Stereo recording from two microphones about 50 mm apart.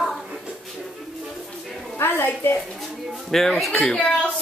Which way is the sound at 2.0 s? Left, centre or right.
Left.